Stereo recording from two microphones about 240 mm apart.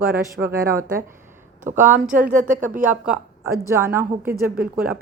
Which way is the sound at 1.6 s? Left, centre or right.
Right.